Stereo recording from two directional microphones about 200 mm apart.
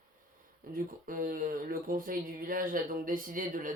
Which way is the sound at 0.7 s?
45° right (ahead or behind).